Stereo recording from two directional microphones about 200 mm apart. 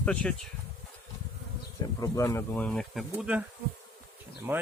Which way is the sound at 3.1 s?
5° right (ahead or behind).